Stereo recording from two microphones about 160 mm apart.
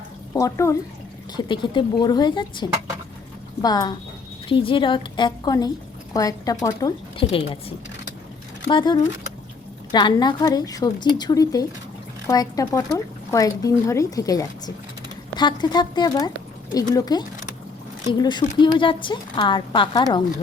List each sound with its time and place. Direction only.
0.3 s a woman's voice: 20° left (ahead or behind)
1.4 s a woman's voice: 30° left (ahead or behind)
7.2 s a woman's voice: 35° left (ahead or behind)
8.6 s a woman's voice: 30° left (ahead or behind)